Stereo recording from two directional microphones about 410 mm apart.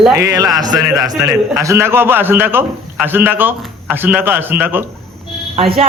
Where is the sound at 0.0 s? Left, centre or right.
Centre.